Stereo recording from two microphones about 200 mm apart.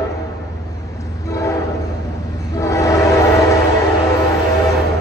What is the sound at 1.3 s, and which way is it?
Train, 15° left (ahead or behind).